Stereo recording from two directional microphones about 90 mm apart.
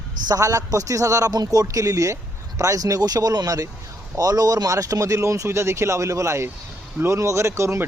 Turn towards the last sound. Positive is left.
turn(degrees=-35)  # may be behind; listen again after turning